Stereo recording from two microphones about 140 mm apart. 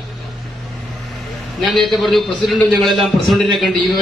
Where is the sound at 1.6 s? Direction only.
Centre (ahead or behind).